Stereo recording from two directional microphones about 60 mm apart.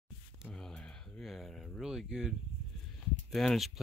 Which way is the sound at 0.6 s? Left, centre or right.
Centre.